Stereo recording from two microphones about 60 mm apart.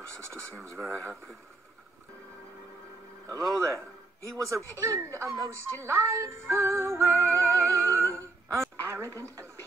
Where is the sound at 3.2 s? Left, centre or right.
Right.